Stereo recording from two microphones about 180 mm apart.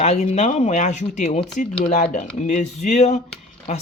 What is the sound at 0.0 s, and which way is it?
Speech, 35° left (ahead or behind).